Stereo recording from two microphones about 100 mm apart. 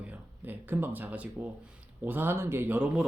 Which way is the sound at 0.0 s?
15° right (ahead or behind).